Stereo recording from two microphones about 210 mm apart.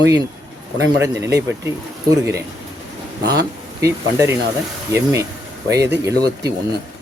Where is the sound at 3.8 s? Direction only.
15° right (ahead or behind).